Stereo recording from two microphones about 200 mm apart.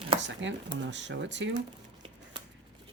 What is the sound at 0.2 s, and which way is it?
Speech, 65° right (ahead or behind).